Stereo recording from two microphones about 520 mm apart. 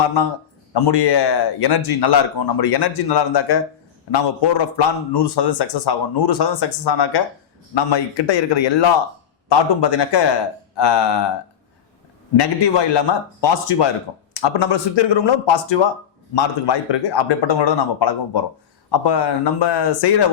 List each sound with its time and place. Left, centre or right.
0.7 s a man's voice: left
12.4 s a man's voice: left